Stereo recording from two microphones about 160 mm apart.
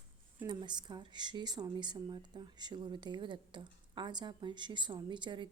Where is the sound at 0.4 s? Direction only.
25° right (ahead or behind).